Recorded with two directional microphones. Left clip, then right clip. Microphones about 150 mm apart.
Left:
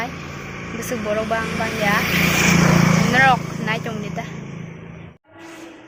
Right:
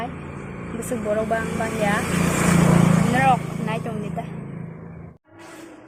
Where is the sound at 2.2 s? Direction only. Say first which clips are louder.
Left 5 dB; 40° right (ahead or behind).